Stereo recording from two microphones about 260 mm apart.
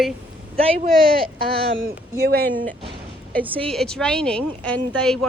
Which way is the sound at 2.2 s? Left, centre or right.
Right.